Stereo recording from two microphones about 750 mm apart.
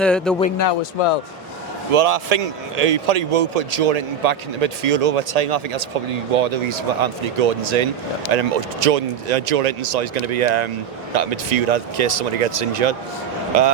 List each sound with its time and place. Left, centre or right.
0.0 s speech: centre
0.7 s a man's voice: left
1.9 s a man's voice: right